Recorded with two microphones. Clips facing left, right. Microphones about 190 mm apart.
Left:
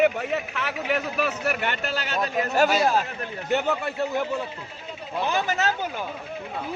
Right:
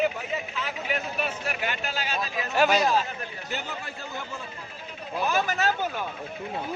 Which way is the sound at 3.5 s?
65° left (ahead or behind).